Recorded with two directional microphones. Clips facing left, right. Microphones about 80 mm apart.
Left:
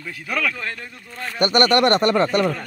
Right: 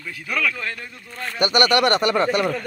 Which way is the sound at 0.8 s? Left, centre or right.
Centre.